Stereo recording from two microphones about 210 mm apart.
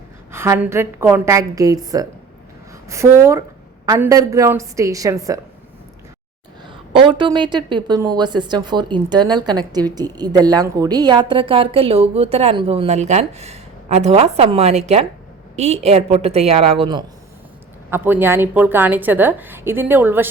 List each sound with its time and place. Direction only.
0.3 s a woman's voice: 10° right (ahead or behind)
6.9 s a woman's voice: 25° right (ahead or behind)
17.9 s a woman's voice: 10° right (ahead or behind)